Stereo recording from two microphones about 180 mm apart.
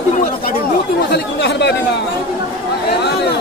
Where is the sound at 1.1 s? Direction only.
70° left (ahead or behind).